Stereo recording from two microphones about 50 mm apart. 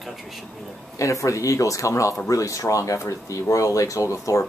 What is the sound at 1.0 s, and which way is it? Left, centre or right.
A man's voice, left.